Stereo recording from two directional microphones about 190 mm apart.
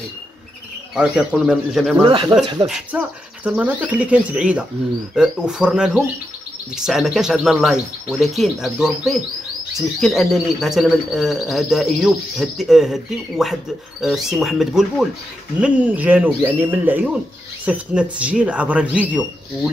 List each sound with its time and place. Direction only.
0.9 s speech: 5° right (ahead or behind)
2.0 s speech: 25° right (ahead or behind)
2.6 s speech: 5° right (ahead or behind)